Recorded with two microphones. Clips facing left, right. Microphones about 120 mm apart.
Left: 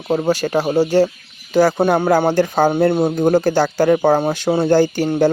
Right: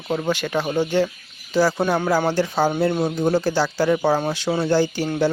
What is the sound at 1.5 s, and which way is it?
Speech, 50° left (ahead or behind).